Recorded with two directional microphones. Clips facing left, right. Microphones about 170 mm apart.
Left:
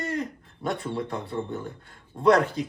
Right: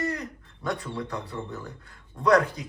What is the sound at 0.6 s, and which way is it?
Speech, 25° left (ahead or behind).